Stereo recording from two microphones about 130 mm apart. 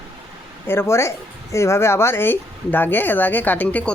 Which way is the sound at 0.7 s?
20° left (ahead or behind).